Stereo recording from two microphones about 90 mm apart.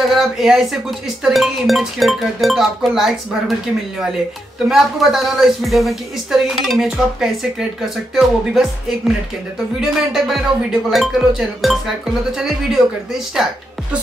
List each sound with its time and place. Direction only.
0.1 s speech: 5° right (ahead or behind)
4.6 s speech: 5° right (ahead or behind)